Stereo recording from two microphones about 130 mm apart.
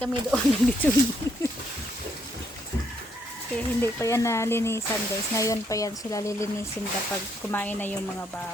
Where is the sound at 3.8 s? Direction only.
20° left (ahead or behind).